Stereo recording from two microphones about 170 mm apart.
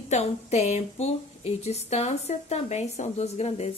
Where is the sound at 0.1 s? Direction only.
40° left (ahead or behind).